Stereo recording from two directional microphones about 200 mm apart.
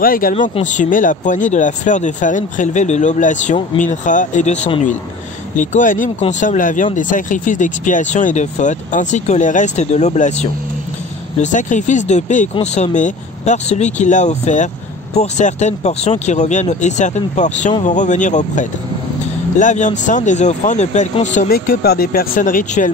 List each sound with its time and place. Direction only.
0.0 s speech: 45° left (ahead or behind)
5.6 s speech: 40° left (ahead or behind)